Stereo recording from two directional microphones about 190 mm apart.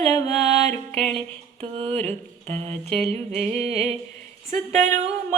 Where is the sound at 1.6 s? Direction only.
30° right (ahead or behind).